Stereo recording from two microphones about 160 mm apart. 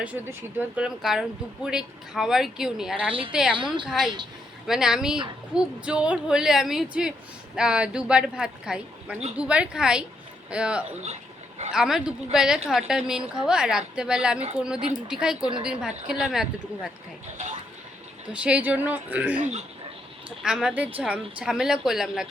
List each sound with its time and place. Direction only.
0.0 s speech: 10° right (ahead or behind)
3.1 s a woman's voice: 35° right (ahead or behind)
3.8 s speech: 5° right (ahead or behind)
11.0 s a sound: 45° right (ahead or behind)
11.7 s speech: 5° right (ahead or behind)
17.3 s speech: 45° right (ahead or behind)
18.3 s speech: 10° right (ahead or behind)
19.4 s speech: 45° right (ahead or behind)
20.4 s speech: 5° right (ahead or behind)